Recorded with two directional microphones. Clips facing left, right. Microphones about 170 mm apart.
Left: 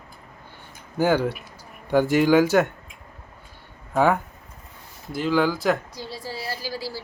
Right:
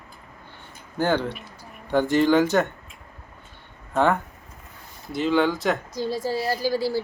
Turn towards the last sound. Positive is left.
turn(degrees=-50)  # may be behind; listen again after turning